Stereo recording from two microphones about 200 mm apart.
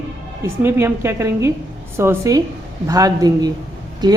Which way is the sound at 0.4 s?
10° right (ahead or behind).